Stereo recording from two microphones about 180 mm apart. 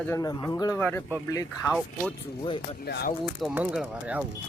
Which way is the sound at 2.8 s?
65° left (ahead or behind).